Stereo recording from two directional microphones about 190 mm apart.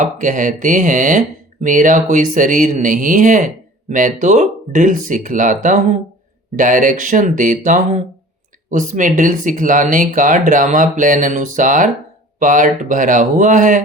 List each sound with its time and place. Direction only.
0.0 s speech: 40° right (ahead or behind)